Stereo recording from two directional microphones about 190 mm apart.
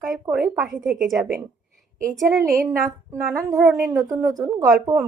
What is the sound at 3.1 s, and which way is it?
Speech, 15° right (ahead or behind).